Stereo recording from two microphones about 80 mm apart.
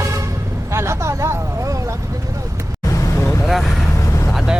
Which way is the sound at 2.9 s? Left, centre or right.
Left.